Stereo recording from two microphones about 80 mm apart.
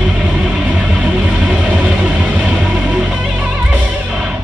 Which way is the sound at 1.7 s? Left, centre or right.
Centre.